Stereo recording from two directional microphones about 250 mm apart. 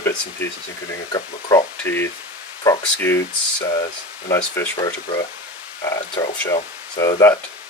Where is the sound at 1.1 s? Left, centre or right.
Centre.